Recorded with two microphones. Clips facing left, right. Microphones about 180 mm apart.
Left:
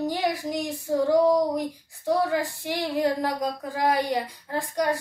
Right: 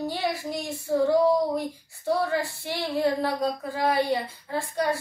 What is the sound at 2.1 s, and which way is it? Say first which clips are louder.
Speech: left 1 dB; 15° left (ahead or behind).